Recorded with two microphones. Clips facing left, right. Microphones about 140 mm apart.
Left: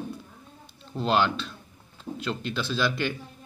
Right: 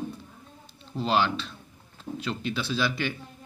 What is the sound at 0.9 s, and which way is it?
Speech, centre (ahead or behind).